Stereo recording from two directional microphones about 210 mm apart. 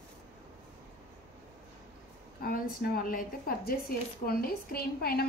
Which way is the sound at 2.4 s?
45° left (ahead or behind).